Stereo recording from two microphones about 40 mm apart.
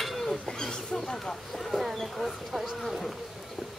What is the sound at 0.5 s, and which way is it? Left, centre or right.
Speech, centre.